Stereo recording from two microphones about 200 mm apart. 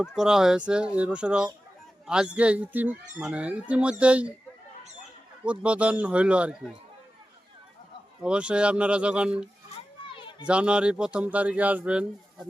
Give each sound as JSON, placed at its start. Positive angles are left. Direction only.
{"t": 0.2, "sound": "speech", "side_deg": 0}
{"t": 5.5, "sound": "speech", "side_deg": -5}
{"t": 8.2, "sound": "speech", "side_deg": -5}
{"t": 9.7, "sound": "children playing", "side_deg": 25}
{"t": 10.4, "sound": "speech", "side_deg": -5}